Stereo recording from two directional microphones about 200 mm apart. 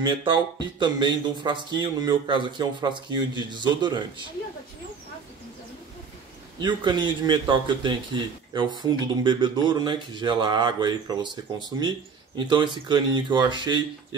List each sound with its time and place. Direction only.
0.0 s a man's voice: 25° right (ahead or behind)
6.6 s a man's voice: 25° right (ahead or behind)
12.4 s a man's voice: 25° right (ahead or behind)